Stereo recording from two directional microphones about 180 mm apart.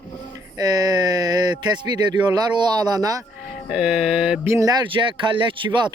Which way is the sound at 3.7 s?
5° right (ahead or behind).